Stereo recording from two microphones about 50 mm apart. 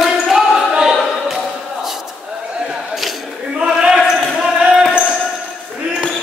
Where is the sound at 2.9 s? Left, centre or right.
Centre.